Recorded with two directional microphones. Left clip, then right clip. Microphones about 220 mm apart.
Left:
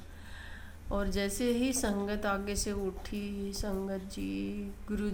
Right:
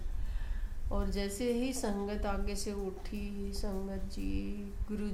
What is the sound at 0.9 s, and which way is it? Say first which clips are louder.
A woman's voice: left 4 dB; 15° left (ahead or behind).